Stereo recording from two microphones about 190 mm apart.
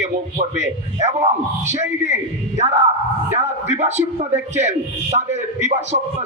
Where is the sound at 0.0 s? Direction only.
35° right (ahead or behind).